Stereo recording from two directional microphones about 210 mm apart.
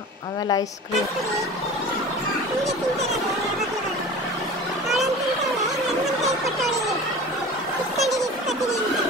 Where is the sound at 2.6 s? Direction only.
Centre (ahead or behind).